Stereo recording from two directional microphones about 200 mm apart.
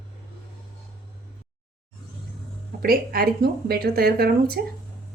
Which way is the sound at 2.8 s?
50° right (ahead or behind).